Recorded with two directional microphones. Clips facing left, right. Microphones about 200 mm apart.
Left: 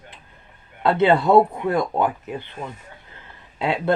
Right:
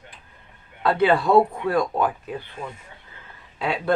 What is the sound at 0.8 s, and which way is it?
A woman's voice, 25° left (ahead or behind).